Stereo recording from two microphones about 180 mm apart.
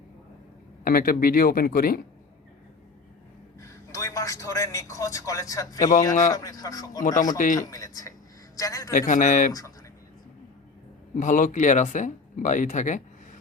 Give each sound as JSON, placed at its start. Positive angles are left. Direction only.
{"t": 0.9, "sound": "speech", "side_deg": 55}
{"t": 3.6, "sound": "a man's voice", "side_deg": 20}
{"t": 6.1, "sound": "speech", "side_deg": 45}
{"t": 6.3, "sound": "a man's voice", "side_deg": 20}
{"t": 7.0, "sound": "speech", "side_deg": 45}
{"t": 7.7, "sound": "a man's voice", "side_deg": 20}
{"t": 8.9, "sound": "speech", "side_deg": 45}
{"t": 9.5, "sound": "a man's voice", "side_deg": 20}
{"t": 11.1, "sound": "speech", "side_deg": 45}